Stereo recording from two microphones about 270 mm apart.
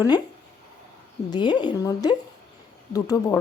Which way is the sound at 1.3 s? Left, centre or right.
Centre.